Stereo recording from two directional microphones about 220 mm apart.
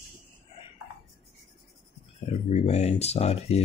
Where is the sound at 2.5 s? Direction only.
30° left (ahead or behind).